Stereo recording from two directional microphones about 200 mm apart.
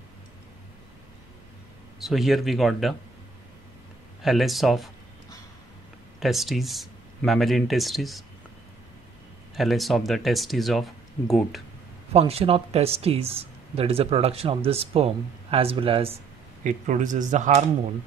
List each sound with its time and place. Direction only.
2.0 s speech: centre (ahead or behind)
4.2 s speech: centre (ahead or behind)
6.1 s speech: centre (ahead or behind)
9.6 s speech: centre (ahead or behind)
12.1 s speech: 30° right (ahead or behind)
16.6 s speech: 40° right (ahead or behind)